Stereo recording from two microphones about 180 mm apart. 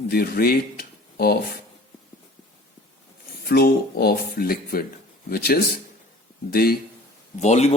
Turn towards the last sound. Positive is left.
turn(degrees=40)  # may be behind; listen again after turning